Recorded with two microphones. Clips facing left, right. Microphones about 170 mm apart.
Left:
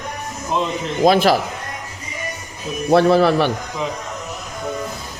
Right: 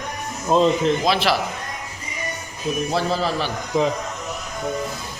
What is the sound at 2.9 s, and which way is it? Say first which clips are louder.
Speech: left 13 dB; 65° left (ahead or behind).